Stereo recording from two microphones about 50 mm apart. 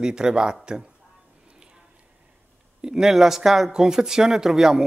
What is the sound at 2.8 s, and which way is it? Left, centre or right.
Speech, centre.